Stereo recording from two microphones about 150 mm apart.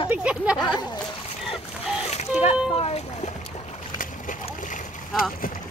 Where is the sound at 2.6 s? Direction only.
40° left (ahead or behind).